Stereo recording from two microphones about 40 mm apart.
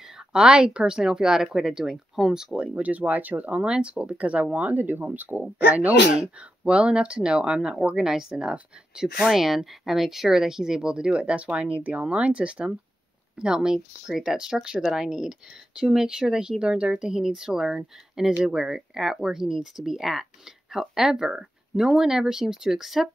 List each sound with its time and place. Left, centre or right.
0.3 s speech: centre
2.7 s speech: right
3.6 s speech: right
4.7 s speech: right
6.1 s speech: right
13.4 s speech: centre